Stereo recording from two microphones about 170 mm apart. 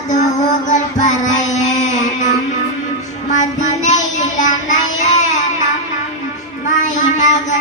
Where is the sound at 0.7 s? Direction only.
45° left (ahead or behind).